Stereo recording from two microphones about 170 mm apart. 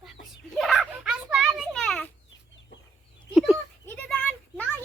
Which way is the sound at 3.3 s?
Centre (ahead or behind).